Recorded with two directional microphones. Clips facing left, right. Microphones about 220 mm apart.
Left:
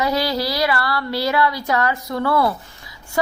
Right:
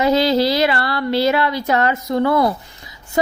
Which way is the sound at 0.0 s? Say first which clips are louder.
Right 6 dB; 25° right (ahead or behind).